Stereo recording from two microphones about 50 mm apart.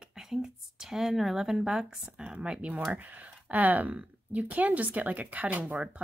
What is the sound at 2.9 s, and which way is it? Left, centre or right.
A woman's voice, right.